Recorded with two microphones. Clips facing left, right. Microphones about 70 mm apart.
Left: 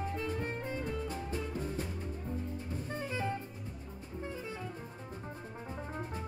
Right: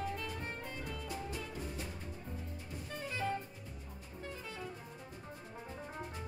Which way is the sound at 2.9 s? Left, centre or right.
Left.